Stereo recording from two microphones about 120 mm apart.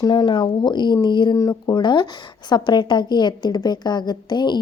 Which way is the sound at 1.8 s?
40° left (ahead or behind).